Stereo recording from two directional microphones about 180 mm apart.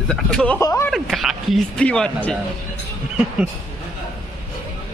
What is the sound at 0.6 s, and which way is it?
Speech, 15° left (ahead or behind).